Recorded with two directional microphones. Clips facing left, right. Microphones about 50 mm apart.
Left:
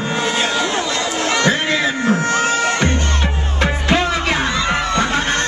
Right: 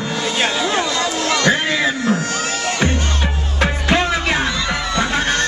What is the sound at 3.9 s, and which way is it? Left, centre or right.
Music, centre.